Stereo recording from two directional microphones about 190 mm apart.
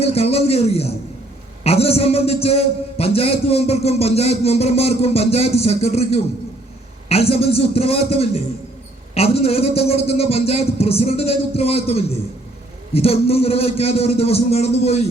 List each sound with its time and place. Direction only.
0.0 s a man's voice: 30° left (ahead or behind)